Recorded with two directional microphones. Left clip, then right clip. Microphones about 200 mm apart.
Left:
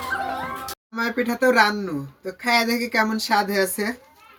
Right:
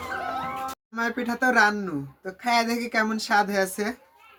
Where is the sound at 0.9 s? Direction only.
15° right (ahead or behind).